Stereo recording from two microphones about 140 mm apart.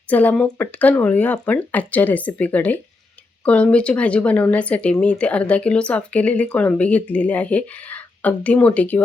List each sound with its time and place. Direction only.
0.1 s speech: 10° left (ahead or behind)